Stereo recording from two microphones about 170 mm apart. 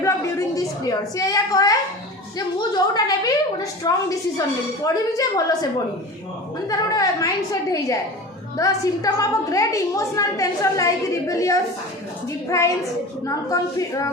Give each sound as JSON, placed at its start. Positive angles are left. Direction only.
{"t": 0.0, "sound": "a sound", "side_deg": 20}
{"t": 2.6, "sound": "a woman's voice", "side_deg": 25}
{"t": 6.7, "sound": "a woman's voice", "side_deg": 20}